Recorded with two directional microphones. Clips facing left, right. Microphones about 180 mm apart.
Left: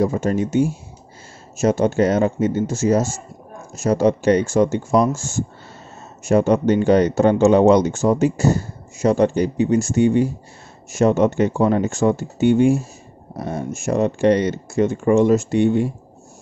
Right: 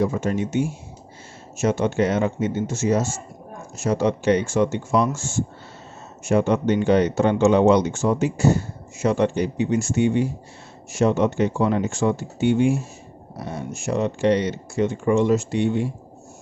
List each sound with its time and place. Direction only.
0.0 s speech: 40° left (ahead or behind)